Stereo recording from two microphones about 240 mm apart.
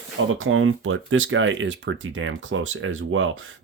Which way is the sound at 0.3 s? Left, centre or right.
Right.